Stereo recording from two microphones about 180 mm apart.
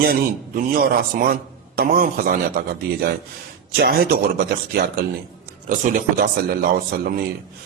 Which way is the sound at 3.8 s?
60° right (ahead or behind).